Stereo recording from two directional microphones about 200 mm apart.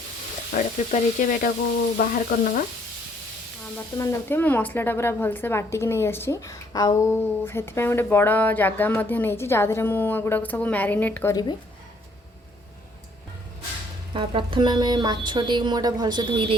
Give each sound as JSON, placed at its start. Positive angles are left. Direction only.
{"t": 0.5, "sound": "frying", "side_deg": 40}
{"t": 2.0, "sound": "sizzle", "side_deg": 45}
{"t": 3.9, "sound": "a woman's voice", "side_deg": 15}
{"t": 14.1, "sound": "a woman's voice", "side_deg": -25}